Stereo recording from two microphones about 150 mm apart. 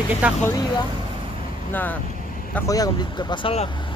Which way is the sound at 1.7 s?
10° left (ahead or behind).